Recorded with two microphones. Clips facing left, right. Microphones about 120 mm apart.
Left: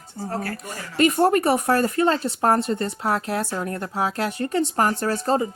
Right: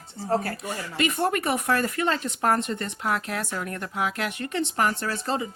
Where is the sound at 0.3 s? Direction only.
25° right (ahead or behind).